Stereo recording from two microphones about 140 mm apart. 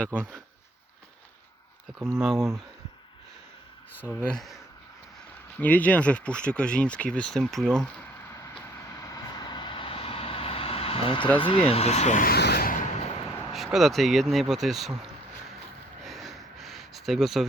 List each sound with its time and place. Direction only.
0.0 s speech: 10° left (ahead or behind)
2.2 s speech: centre (ahead or behind)
4.1 s speech: 5° left (ahead or behind)
8.3 s vehicle: 20° left (ahead or behind); by 11.3 s 40° left (ahead or behind)
11.3 s speech: 35° left (ahead or behind); by 12.8 s 90° left
13.5 s speech: centre (ahead or behind)
16.0 s a sound: centre (ahead or behind)